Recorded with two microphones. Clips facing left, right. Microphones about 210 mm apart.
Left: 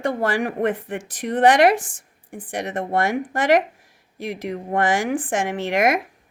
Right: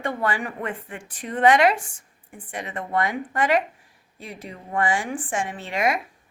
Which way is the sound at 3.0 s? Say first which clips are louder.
Left 5 dB; 60° left (ahead or behind).